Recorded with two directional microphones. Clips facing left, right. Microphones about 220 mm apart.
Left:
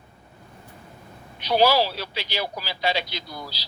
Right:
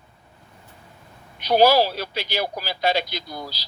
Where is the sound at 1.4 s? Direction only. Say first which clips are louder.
Right 3 dB; 45° right (ahead or behind).